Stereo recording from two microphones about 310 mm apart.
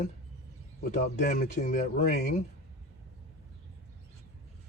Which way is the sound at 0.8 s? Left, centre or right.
Left.